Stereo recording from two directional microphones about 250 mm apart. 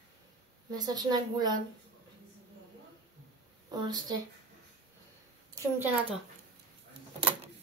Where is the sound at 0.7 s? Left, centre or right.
Centre.